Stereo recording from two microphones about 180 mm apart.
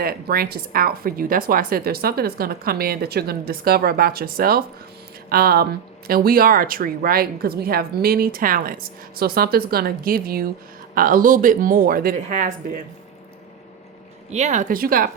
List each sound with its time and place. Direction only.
0.0 s speech: 55° right (ahead or behind)
14.3 s speech: 40° right (ahead or behind)